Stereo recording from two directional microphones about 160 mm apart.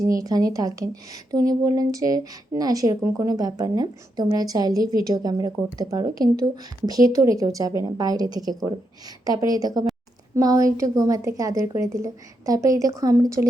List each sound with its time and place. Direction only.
0.0 s speech: 20° right (ahead or behind)
3.0 s speech: 10° right (ahead or behind)
3.2 s speech: 25° right (ahead or behind)